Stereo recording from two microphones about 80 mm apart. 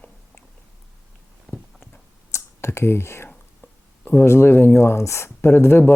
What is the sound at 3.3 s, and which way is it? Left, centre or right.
Speech, left.